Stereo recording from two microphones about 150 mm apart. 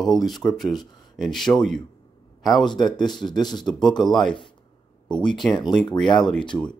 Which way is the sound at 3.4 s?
30° left (ahead or behind).